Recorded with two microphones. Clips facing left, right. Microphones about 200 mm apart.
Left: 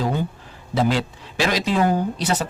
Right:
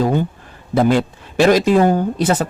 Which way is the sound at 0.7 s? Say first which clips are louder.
Right 6 dB; 55° right (ahead or behind).